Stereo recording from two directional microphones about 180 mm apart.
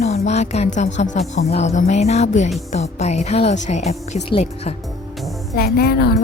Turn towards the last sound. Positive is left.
turn(degrees=60)  # may be behind; listen again after turning